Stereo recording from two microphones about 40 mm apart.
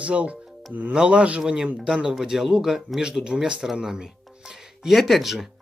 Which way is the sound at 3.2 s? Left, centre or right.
Centre.